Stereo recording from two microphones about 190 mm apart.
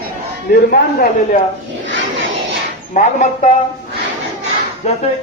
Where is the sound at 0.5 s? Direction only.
50° left (ahead or behind).